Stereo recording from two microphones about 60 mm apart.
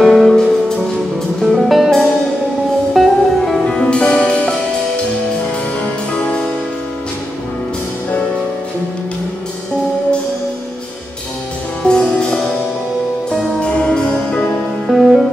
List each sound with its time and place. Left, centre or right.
0.0 s music: centre
5.8 s music: centre
11.8 s music: centre
14.9 s music: centre